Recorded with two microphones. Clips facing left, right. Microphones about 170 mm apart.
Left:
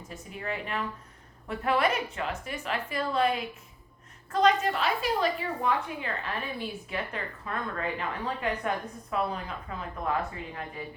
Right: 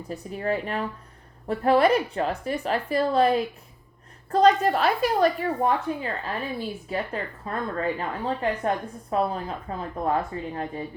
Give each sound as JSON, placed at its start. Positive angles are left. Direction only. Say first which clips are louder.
{"t": 0.1, "sound": "a woman's voice", "louder": "right 9 dB", "side_deg": -40}